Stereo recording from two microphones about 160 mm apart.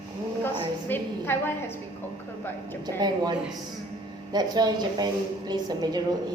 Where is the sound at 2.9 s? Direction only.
25° right (ahead or behind).